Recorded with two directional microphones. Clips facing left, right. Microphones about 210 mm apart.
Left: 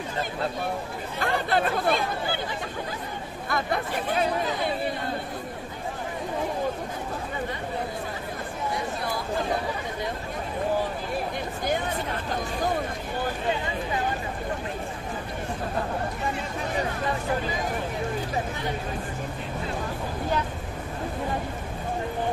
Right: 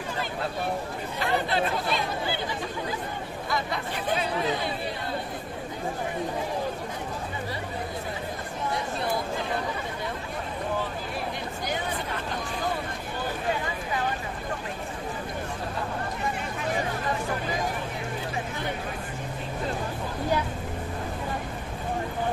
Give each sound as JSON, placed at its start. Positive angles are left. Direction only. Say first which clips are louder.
{"t": 1.2, "sound": "speech", "louder": "left 1 dB", "side_deg": 50}
{"t": 3.4, "sound": "speech", "louder": "left 3 dB", "side_deg": 55}